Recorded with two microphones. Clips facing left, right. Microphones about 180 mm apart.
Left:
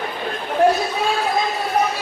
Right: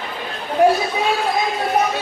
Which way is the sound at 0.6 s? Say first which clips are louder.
Right 2 dB; 15° right (ahead or behind).